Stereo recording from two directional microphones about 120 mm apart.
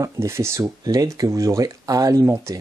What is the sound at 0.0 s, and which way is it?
Speech, 25° right (ahead or behind).